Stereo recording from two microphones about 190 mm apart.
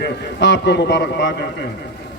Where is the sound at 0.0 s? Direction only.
65° left (ahead or behind).